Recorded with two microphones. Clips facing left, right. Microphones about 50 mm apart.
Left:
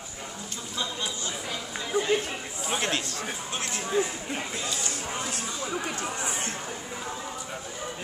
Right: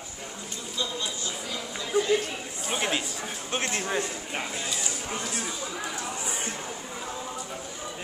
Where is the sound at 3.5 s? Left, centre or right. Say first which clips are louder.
Right 3 dB; right.